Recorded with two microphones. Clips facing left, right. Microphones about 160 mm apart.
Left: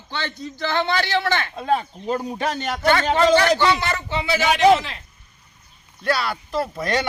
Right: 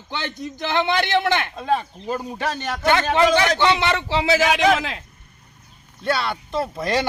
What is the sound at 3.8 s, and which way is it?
Speech, 90° right.